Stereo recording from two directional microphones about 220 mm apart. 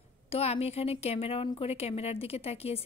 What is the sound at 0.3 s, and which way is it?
A woman's voice, 30° left (ahead or behind).